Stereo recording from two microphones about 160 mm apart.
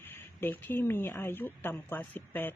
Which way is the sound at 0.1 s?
15° left (ahead or behind).